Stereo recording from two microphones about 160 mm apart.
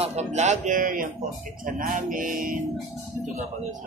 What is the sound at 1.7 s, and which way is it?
Music, 55° right (ahead or behind).